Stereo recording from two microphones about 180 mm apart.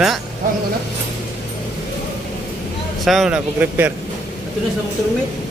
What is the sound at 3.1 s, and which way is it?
Speech, 5° right (ahead or behind).